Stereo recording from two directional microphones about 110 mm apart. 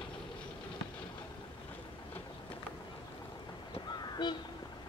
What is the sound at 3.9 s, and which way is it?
Crow, 40° left (ahead or behind).